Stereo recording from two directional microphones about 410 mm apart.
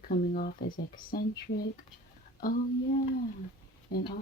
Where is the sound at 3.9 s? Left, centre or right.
Left.